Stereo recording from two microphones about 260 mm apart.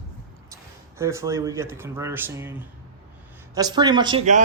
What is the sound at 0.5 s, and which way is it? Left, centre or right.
A man's voice, centre.